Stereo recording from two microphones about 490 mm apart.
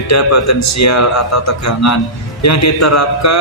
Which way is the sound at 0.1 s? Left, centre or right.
Left.